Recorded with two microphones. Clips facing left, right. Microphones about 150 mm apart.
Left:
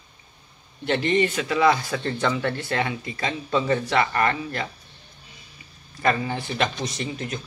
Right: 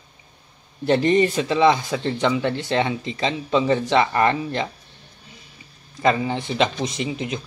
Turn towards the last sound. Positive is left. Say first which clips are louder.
# right 4 dB
turn(degrees=-15)  # may be behind; listen again after turning